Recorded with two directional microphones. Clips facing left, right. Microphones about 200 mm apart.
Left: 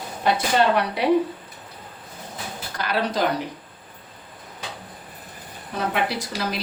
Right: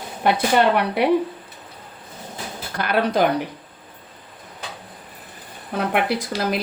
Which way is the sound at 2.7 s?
55° right (ahead or behind).